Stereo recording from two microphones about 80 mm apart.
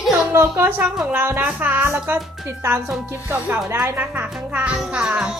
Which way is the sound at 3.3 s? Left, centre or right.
Right.